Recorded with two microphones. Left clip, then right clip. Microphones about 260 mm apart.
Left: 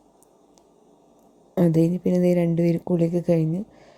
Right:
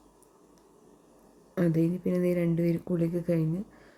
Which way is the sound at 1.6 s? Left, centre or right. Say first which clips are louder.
Left 7 dB; centre.